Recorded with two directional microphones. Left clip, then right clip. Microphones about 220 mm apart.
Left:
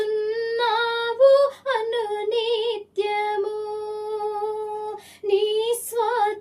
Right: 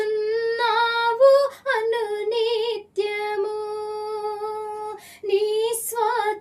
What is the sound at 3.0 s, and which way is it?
Child singing, centre (ahead or behind).